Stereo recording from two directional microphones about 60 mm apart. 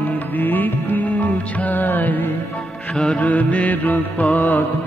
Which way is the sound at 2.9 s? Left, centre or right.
Centre.